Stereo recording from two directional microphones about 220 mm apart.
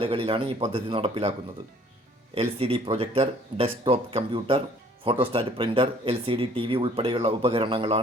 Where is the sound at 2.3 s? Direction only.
25° right (ahead or behind).